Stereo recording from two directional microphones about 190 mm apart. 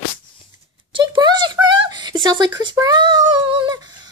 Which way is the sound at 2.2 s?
20° right (ahead or behind).